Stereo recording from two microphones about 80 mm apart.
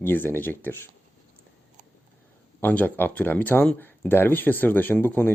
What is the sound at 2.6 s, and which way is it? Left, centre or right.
Speech, left.